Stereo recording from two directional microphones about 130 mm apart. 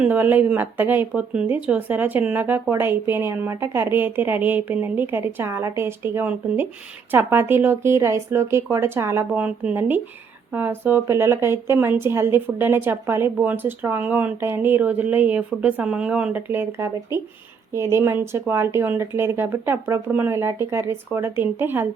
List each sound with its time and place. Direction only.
0.0 s speech: 15° right (ahead or behind)